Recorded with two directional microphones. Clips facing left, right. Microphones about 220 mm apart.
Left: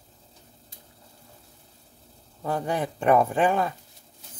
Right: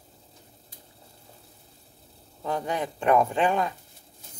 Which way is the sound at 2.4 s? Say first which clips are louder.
Left 2 dB; 10° left (ahead or behind).